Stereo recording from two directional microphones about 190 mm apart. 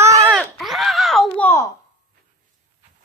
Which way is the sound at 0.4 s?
Centre (ahead or behind).